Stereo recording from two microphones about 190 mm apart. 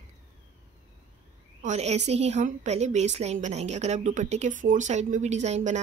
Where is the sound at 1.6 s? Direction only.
35° right (ahead or behind).